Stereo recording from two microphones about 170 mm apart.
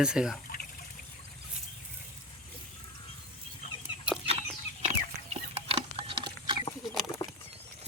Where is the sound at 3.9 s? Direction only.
35° left (ahead or behind).